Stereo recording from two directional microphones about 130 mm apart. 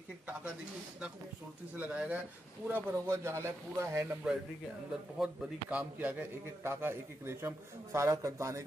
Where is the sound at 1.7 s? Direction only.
10° right (ahead or behind).